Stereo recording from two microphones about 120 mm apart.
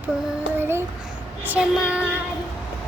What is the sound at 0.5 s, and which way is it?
Child singing, 20° right (ahead or behind).